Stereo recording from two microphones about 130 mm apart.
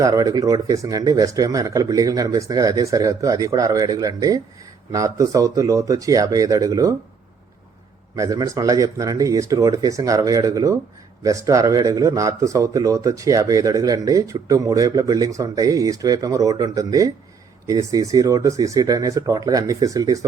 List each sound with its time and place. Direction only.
0.0 s speech: 30° right (ahead or behind)
8.1 s speech: 25° right (ahead or behind)